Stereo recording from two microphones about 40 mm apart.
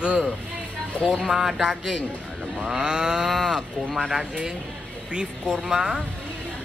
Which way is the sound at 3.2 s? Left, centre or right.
Centre.